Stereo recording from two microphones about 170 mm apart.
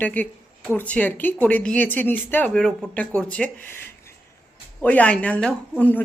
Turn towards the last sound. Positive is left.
turn(degrees=10)  # may be behind; listen again after turning